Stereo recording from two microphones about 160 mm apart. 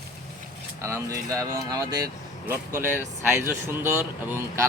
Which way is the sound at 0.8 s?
20° right (ahead or behind).